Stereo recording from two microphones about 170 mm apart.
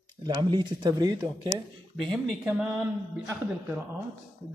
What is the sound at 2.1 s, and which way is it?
Speech, 5° right (ahead or behind).